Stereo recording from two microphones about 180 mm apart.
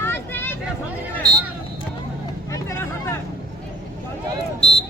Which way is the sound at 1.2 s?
20° right (ahead or behind).